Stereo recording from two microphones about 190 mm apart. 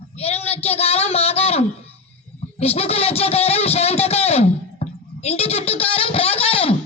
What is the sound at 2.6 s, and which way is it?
Speech, 30° left (ahead or behind).